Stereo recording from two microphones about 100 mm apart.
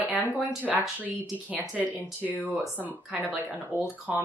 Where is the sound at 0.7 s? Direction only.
15° right (ahead or behind).